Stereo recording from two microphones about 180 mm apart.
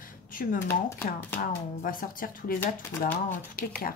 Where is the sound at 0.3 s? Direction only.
50° left (ahead or behind).